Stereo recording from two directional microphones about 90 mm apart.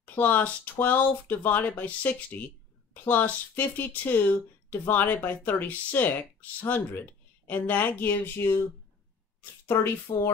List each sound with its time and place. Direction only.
0.0 s speech: 20° left (ahead or behind)
10.1 s speech: 60° left (ahead or behind)